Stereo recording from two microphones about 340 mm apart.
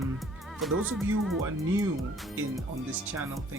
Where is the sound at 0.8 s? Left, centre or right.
Centre.